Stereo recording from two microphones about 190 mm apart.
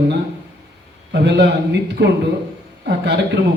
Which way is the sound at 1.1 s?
65° right (ahead or behind).